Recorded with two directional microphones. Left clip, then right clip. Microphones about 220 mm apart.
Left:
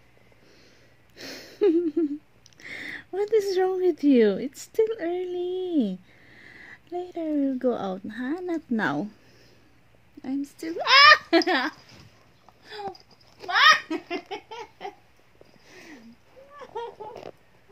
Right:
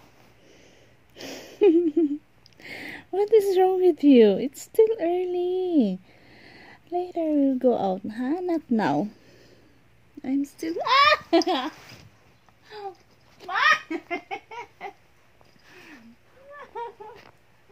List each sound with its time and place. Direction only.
1.2 s a sound: 10° right (ahead or behind)
2.6 s speech: 5° right (ahead or behind)
10.2 s speech: 10° right (ahead or behind)
10.8 s speech: 10° left (ahead or behind)
12.7 s babbling: 20° left (ahead or behind)
13.5 s baby laughter: 10° left (ahead or behind)
16.5 s a sound: 5° left (ahead or behind)